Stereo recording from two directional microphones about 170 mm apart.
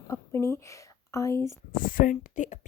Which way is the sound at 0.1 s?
15° left (ahead or behind).